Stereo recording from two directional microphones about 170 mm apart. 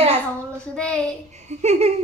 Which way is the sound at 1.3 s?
40° right (ahead or behind).